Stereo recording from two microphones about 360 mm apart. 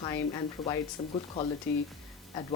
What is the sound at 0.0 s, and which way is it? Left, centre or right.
Speech, centre.